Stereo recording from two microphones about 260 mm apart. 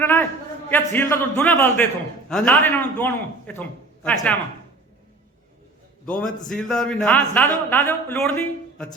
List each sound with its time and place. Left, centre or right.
0.0 s a man's voice: centre
6.1 s a man's voice: centre